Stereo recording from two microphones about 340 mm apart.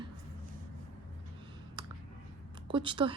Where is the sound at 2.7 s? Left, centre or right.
Centre.